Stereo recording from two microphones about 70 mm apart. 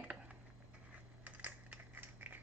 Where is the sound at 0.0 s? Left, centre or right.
Centre.